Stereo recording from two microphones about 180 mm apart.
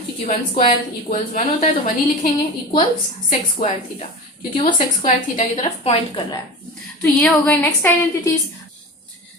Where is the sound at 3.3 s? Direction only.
40° left (ahead or behind).